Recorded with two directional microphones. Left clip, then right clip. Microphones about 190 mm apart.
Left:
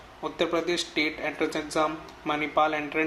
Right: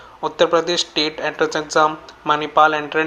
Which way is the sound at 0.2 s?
20° right (ahead or behind).